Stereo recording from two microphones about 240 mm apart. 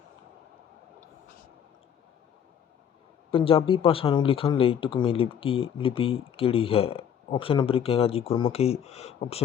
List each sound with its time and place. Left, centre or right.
3.3 s speech: left